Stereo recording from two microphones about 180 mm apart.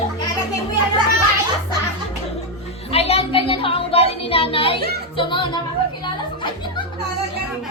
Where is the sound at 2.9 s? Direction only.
35° left (ahead or behind).